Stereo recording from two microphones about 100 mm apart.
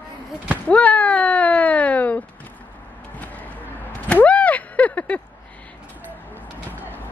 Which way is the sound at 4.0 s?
15° left (ahead or behind).